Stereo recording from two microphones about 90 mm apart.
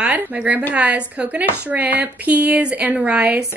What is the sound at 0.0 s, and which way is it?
A woman's voice, 15° right (ahead or behind).